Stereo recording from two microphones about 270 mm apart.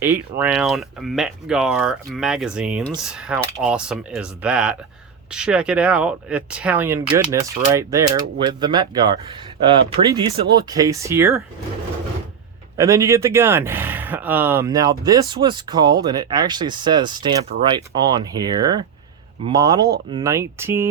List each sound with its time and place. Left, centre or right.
0.0 s speech: centre
12.7 s speech: centre